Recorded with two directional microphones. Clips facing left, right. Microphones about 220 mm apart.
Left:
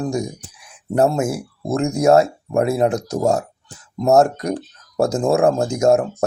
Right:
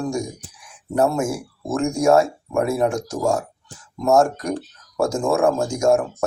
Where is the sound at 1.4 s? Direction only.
35° left (ahead or behind).